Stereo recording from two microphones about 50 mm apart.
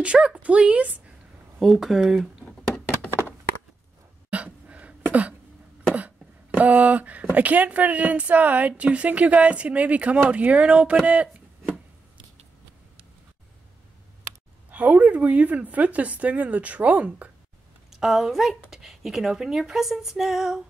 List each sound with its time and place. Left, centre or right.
0.0 s a woman's voice: right
1.6 s speech: centre
4.3 s a sound: right
7.3 s a woman's voice: right
14.7 s a woman's voice: right
17.8 s a woman's voice: centre